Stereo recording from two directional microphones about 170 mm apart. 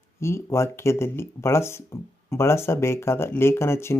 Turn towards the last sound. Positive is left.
turn(degrees=15)  # may be behind; listen again after turning